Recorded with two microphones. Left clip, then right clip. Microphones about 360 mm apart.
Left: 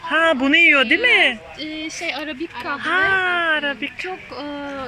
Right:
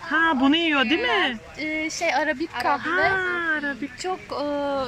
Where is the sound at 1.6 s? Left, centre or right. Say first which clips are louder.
Right 2 dB; right.